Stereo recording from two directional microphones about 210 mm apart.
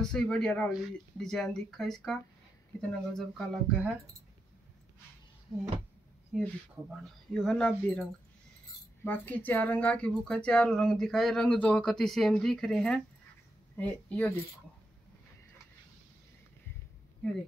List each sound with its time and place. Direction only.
0.0 s speech: 5° left (ahead or behind)
6.3 s speech: 5° right (ahead or behind)
9.0 s speech: 10° left (ahead or behind)